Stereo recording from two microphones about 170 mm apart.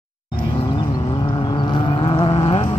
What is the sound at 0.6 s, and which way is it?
Vehicle, 30° left (ahead or behind).